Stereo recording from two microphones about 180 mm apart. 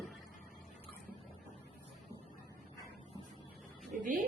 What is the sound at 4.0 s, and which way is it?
Speech, 50° right (ahead or behind).